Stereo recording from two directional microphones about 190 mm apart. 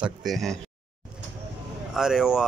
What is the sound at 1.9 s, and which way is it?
Speech, 5° right (ahead or behind).